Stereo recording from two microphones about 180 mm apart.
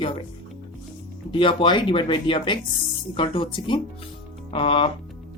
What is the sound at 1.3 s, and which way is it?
Speech, 30° left (ahead or behind).